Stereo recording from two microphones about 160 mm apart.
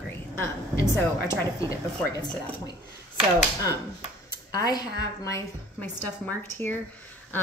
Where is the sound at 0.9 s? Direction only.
15° left (ahead or behind).